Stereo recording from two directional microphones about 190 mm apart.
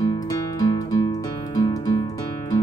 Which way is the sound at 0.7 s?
20° left (ahead or behind).